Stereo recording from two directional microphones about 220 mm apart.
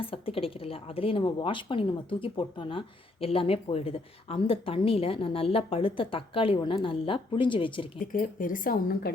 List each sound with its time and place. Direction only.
0.0 s a woman's voice: 25° left (ahead or behind)
8.0 s a woman's voice: 40° left (ahead or behind)